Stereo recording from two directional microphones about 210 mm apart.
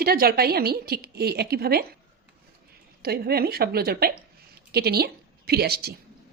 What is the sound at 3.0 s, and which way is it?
A woman's voice, 50° right (ahead or behind).